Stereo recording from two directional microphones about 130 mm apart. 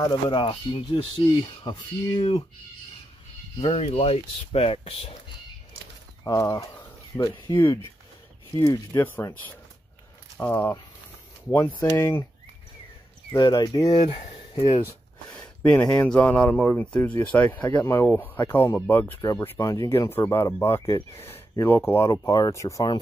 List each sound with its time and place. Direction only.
0.0 s speech: 40° left (ahead or behind)
3.6 s speech: 50° left (ahead or behind)
6.2 s speech: 25° left (ahead or behind)
9.0 s speech: 15° left (ahead or behind)
13.3 s speech: 30° left (ahead or behind)
14.0 s speech: 40° left (ahead or behind)
15.3 s a sound: 10° left (ahead or behind)
15.9 s speech: 10° left (ahead or behind); by 22.9 s 25° left (ahead or behind)